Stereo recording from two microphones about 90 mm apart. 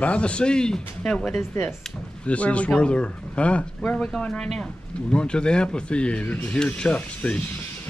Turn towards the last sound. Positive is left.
turn(degrees=15)  # may be behind; listen again after turning